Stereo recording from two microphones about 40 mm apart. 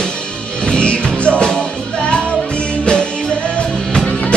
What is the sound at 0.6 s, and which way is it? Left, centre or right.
Music, left.